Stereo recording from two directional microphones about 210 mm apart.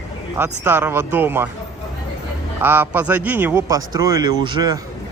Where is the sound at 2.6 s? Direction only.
10° right (ahead or behind).